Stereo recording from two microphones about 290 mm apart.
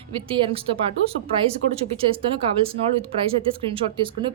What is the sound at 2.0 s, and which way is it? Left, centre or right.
A woman's voice, centre.